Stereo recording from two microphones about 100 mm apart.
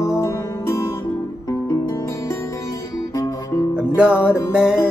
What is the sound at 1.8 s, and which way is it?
Music, 30° left (ahead or behind).